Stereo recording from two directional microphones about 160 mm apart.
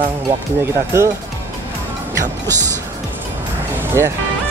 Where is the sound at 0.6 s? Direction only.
15° right (ahead or behind).